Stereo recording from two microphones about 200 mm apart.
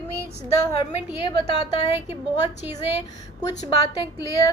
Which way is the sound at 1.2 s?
25° left (ahead or behind).